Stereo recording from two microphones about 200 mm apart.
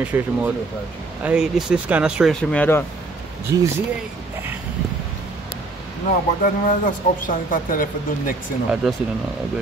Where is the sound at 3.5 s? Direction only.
15° right (ahead or behind).